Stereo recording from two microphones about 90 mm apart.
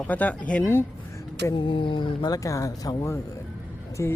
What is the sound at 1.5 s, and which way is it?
Speech, 65° left (ahead or behind).